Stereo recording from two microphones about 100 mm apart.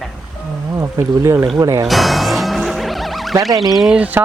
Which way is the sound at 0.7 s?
30° right (ahead or behind).